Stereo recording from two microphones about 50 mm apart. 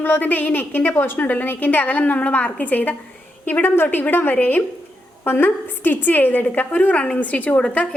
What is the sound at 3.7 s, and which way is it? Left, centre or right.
A woman's voice, left.